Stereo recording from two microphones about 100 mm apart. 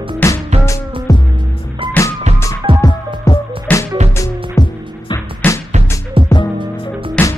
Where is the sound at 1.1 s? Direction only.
35° left (ahead or behind).